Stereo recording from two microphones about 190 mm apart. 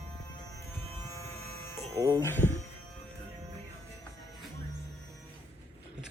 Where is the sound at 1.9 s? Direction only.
15° right (ahead or behind).